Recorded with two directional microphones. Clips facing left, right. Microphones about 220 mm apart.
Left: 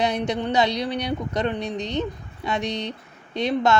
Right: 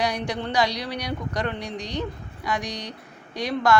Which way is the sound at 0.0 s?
20° left (ahead or behind).